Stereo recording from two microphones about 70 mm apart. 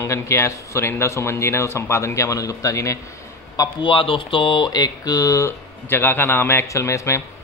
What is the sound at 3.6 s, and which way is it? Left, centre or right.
Speech, left.